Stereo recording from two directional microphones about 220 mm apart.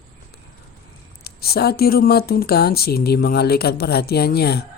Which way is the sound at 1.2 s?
45° left (ahead or behind).